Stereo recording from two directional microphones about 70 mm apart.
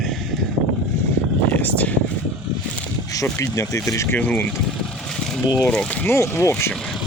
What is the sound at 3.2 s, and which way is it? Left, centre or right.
Speech, left.